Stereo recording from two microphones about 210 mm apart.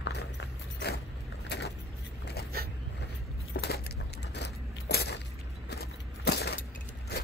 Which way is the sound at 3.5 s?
50° left (ahead or behind).